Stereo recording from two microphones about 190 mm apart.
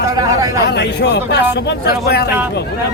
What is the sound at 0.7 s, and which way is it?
Speech, 65° left (ahead or behind).